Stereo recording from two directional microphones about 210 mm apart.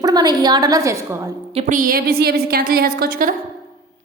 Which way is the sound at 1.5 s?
35° right (ahead or behind).